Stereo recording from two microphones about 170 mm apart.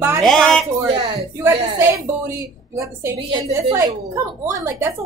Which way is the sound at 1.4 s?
15° right (ahead or behind).